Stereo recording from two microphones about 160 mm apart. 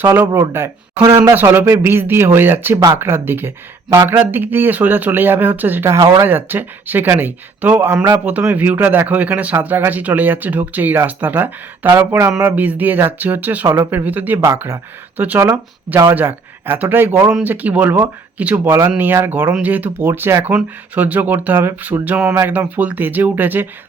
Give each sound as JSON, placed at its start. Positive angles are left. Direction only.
{"t": 0.0, "sound": "speech", "side_deg": -15}